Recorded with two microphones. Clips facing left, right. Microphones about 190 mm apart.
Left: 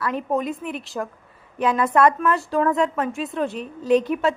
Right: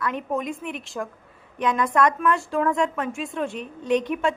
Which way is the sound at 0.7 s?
Centre (ahead or behind).